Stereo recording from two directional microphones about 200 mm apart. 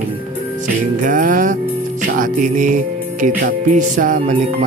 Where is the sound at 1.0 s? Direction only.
40° right (ahead or behind).